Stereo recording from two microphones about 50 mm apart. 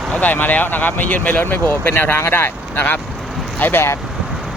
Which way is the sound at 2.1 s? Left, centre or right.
Left.